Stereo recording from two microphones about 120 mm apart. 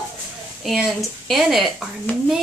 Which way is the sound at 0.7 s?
Centre (ahead or behind).